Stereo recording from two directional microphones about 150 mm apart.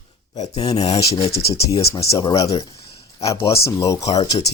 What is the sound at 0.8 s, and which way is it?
Speech, 40° left (ahead or behind).